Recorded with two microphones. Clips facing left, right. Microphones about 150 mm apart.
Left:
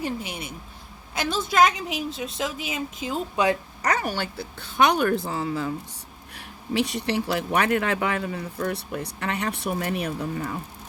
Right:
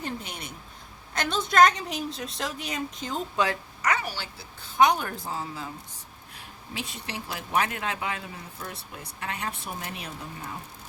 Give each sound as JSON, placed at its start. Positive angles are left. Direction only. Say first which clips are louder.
{"t": 0.0, "sound": "a woman's voice", "louder": "left 5 dB", "side_deg": 10}
{"t": 3.8, "sound": "speech", "louder": "left 3 dB", "side_deg": 45}